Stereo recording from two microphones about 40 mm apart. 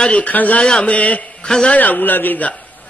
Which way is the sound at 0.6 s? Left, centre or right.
Left.